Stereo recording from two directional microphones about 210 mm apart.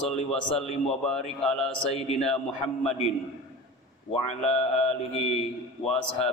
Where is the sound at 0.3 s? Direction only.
5° left (ahead or behind).